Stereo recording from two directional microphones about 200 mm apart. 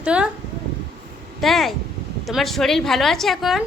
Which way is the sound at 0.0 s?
5° right (ahead or behind).